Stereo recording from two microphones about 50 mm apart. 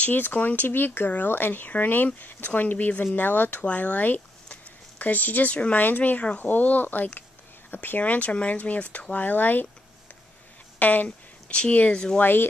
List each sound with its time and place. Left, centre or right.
0.0 s speech: left
0.7 s speech: left
8.0 s speech: left
10.8 s speech: left
11.1 s speech: left
12.2 s speech: left